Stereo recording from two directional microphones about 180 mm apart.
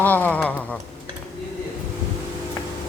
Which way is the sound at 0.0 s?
10° left (ahead or behind).